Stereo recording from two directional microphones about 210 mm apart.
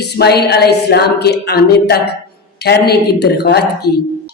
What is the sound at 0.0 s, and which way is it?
A woman's voice, 50° left (ahead or behind).